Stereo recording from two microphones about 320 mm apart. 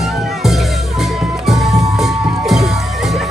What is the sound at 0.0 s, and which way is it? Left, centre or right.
Music, centre.